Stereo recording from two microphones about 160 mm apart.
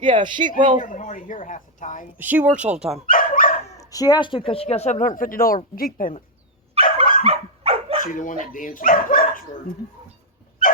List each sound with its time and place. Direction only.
0.0 s speech: 30° right (ahead or behind)
0.8 s a woman's voice: 50° left (ahead or behind)
2.1 s speech: 10° right (ahead or behind)
3.1 s dog: 60° left (ahead or behind)
3.8 s a woman's voice: 20° left (ahead or behind); by 6.1 s 60° left (ahead or behind)
6.8 s dog: 60° left (ahead or behind)
7.3 s dog: 35° right (ahead or behind)
8.0 s speech: 55° left (ahead or behind)